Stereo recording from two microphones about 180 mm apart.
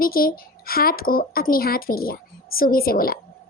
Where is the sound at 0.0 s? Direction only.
55° left (ahead or behind).